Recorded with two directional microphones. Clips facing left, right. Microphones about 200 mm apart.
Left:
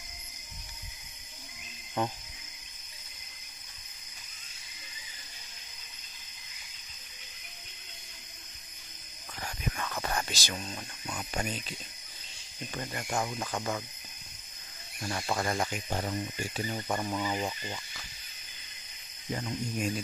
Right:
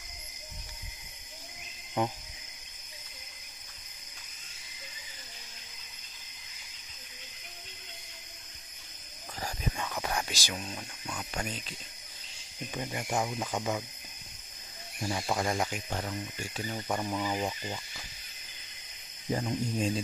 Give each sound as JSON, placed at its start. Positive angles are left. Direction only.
{"t": 9.8, "sound": "whispering", "side_deg": -5}
{"t": 11.1, "sound": "speech", "side_deg": 10}
{"t": 12.7, "sound": "speech", "side_deg": -10}
{"t": 15.0, "sound": "speech", "side_deg": -10}
{"t": 15.9, "sound": "speech", "side_deg": 10}
{"t": 19.3, "sound": "speech", "side_deg": -40}